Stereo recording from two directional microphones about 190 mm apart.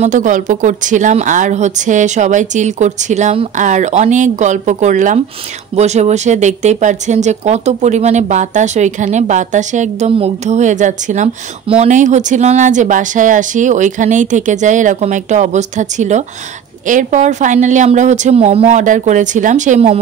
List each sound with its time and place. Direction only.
0.0 s speech: 40° right (ahead or behind)